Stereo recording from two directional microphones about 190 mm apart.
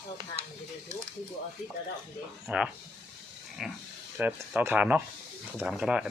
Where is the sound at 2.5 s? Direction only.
5° right (ahead or behind).